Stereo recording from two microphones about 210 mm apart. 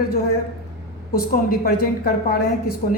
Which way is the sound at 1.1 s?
45° left (ahead or behind).